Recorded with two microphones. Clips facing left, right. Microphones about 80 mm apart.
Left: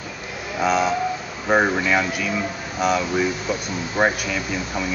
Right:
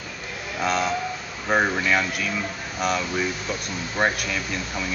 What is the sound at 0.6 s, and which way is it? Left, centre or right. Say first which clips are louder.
Speech: left 4 dB; centre.